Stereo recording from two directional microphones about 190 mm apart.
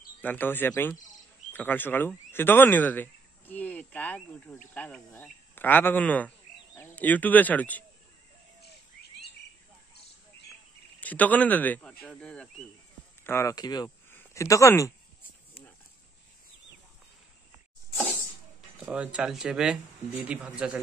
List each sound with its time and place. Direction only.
0.2 s speech: 10° left (ahead or behind)
11.0 s speech: 10° left (ahead or behind)
18.8 s speech: 5° right (ahead or behind)